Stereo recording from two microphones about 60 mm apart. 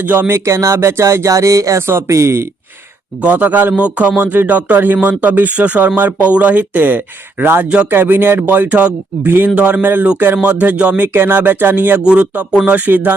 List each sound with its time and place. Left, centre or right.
0.0 s speech: right
1.3 s speech: right
1.9 s speech: right
3.2 s speech: right
7.6 s speech: centre
7.9 s speech: right
11.1 s speech: right
12.0 s speech: centre